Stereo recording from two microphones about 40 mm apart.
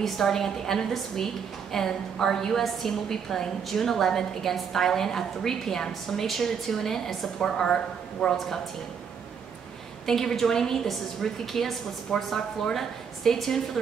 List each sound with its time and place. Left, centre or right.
0.0 s a woman's voice: centre
10.0 s a woman's voice: centre
12.1 s speech: centre
12.7 s a woman's voice: centre